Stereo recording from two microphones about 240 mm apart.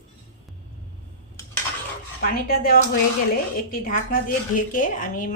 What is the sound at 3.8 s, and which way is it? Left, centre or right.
A woman's voice, left.